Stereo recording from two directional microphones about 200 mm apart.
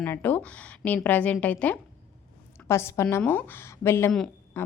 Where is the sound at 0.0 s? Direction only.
10° left (ahead or behind).